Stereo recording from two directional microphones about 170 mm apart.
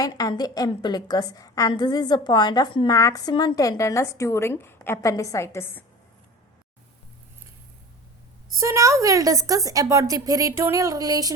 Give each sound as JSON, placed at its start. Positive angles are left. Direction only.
{"t": 0.0, "sound": "a woman's voice", "side_deg": 25}
{"t": 8.5, "sound": "a woman's voice", "side_deg": -15}